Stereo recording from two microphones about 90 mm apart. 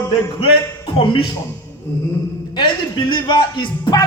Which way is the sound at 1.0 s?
70° left (ahead or behind).